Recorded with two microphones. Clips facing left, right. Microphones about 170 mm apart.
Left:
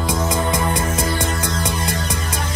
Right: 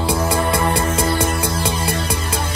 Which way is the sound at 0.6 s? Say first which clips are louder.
Right 2 dB; 30° right (ahead or behind).